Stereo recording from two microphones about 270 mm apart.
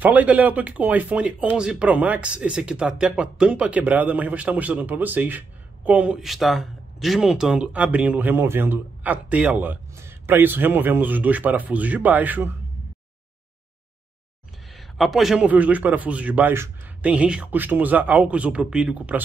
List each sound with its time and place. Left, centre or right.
0.0 s speech: centre
14.7 s speech: centre